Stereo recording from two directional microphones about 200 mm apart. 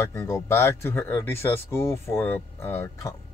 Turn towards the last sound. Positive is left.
turn(degrees=10)  # may be behind; listen again after turning